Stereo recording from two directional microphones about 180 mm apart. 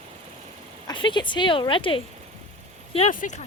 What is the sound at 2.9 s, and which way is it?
Speech, 40° left (ahead or behind).